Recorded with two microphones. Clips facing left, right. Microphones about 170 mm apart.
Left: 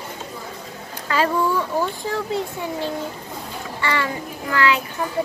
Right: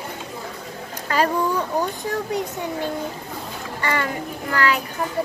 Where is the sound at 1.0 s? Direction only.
40° right (ahead or behind).